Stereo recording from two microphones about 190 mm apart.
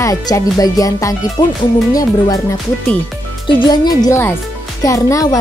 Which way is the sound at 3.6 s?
20° left (ahead or behind).